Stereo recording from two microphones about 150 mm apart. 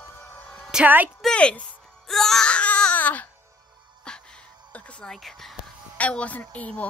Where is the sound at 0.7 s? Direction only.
10° right (ahead or behind).